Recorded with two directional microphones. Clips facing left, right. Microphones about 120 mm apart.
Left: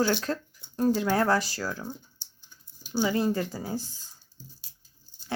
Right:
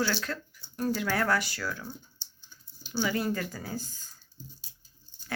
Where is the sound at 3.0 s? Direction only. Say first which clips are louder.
Left 4 dB; 25° left (ahead or behind).